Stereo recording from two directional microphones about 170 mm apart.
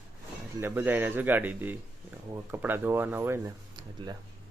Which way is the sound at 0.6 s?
10° right (ahead or behind).